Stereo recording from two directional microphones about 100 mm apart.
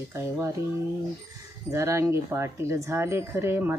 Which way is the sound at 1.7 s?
30° right (ahead or behind).